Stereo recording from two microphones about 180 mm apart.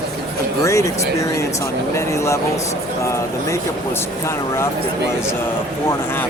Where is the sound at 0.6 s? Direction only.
15° left (ahead or behind).